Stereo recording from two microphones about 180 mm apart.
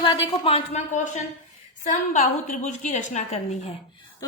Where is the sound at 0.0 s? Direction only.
30° left (ahead or behind).